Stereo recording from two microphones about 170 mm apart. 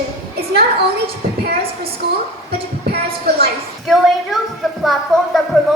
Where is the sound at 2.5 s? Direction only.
65° right (ahead or behind).